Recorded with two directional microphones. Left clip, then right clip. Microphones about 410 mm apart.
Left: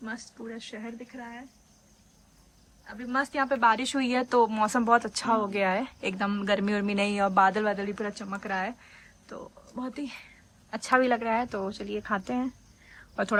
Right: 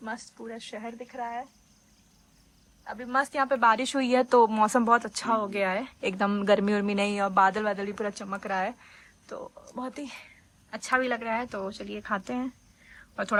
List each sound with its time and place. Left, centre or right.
0.0 s speech: centre
2.8 s speech: centre